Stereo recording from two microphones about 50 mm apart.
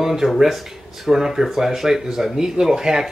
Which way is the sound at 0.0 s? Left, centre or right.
Centre.